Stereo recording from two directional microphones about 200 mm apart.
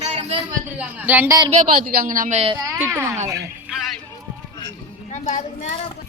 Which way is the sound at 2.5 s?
15° right (ahead or behind).